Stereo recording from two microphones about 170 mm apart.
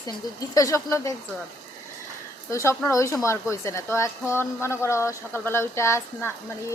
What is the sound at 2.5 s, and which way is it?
A woman's voice, 15° left (ahead or behind).